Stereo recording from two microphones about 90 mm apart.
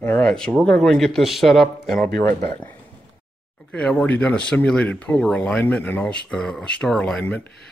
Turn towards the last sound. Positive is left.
turn(degrees=20)  # may be behind; listen again after turning